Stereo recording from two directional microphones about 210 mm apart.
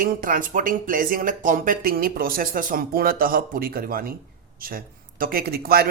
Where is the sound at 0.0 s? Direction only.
40° right (ahead or behind).